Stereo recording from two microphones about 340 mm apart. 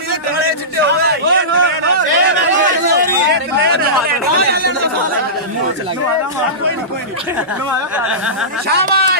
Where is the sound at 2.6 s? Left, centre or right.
Right.